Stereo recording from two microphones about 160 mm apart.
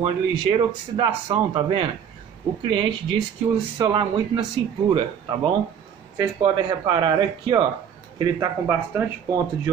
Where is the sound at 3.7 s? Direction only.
30° right (ahead or behind).